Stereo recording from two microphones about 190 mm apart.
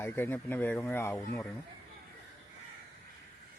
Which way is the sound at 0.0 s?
10° left (ahead or behind).